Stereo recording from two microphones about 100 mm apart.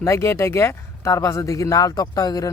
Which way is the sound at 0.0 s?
30° left (ahead or behind).